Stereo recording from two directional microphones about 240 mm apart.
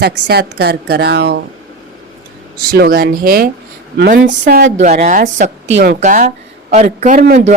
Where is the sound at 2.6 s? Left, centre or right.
Right.